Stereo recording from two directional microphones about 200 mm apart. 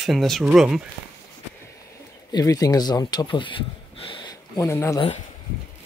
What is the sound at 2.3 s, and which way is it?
Speech, 15° left (ahead or behind).